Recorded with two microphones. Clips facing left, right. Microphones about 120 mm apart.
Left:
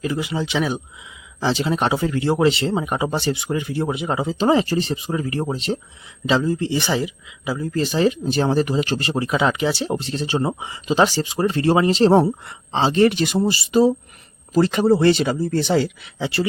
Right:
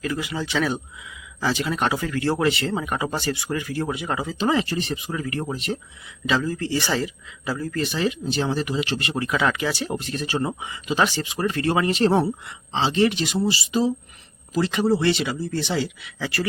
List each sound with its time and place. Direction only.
0.0 s speech: 25° left (ahead or behind)
7.7 s speech: 35° left (ahead or behind)
16.1 s speech: 25° left (ahead or behind)